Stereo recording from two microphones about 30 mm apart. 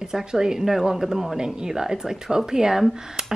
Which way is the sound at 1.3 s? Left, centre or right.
Right.